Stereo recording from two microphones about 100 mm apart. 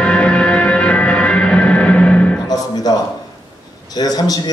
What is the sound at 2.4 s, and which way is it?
Music, 40° left (ahead or behind).